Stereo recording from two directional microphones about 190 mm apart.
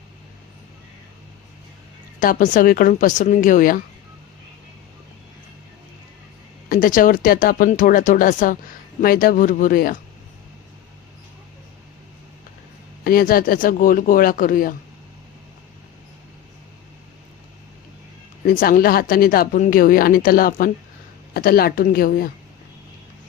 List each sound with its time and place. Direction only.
2.2 s speech: 40° left (ahead or behind)
6.7 s speech: 45° left (ahead or behind)
13.1 s speech: 50° left (ahead or behind)
18.4 s speech: 45° left (ahead or behind)